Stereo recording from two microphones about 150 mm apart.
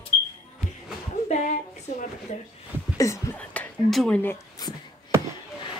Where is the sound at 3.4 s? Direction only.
10° left (ahead or behind).